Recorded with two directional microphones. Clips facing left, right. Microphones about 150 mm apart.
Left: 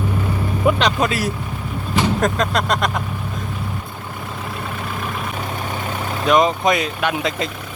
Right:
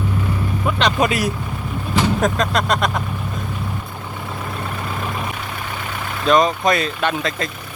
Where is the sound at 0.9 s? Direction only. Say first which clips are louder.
Right 2 dB; 15° right (ahead or behind).